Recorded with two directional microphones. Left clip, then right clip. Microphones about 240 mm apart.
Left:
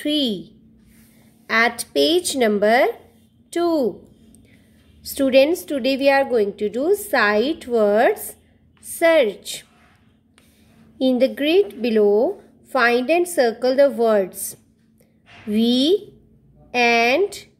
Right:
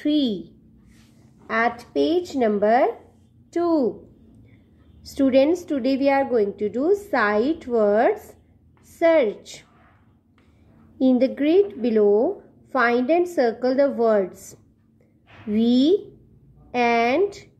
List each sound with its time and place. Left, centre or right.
0.0 s a woman's voice: centre
2.0 s a woman's voice: left
5.0 s a woman's voice: centre
11.0 s a woman's voice: centre